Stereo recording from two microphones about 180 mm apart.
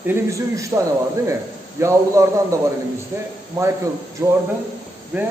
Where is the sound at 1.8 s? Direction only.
15° right (ahead or behind).